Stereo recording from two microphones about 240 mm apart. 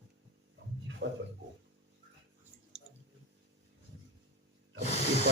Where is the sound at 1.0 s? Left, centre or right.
Right.